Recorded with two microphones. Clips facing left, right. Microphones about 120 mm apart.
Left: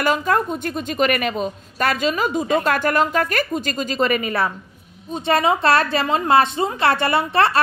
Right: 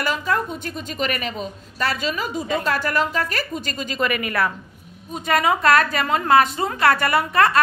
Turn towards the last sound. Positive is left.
turn(degrees=30)  # may be behind; listen again after turning